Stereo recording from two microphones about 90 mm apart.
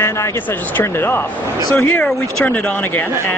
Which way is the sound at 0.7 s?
25° left (ahead or behind).